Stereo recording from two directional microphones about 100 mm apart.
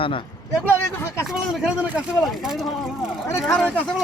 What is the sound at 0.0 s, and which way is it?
Speech, 60° left (ahead or behind).